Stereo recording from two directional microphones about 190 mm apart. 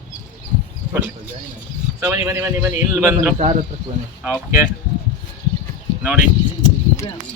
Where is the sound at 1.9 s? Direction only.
15° right (ahead or behind).